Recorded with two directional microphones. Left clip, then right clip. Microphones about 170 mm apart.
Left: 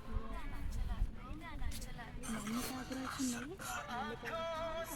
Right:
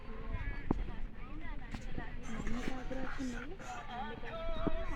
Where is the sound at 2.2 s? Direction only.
15° right (ahead or behind).